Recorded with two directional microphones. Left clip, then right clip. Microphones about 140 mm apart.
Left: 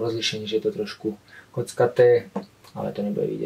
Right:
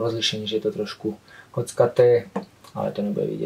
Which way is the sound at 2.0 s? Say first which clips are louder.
Left 1 dB; 30° right (ahead or behind).